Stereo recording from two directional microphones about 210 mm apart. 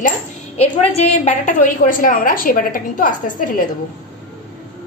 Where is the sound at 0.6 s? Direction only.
30° left (ahead or behind).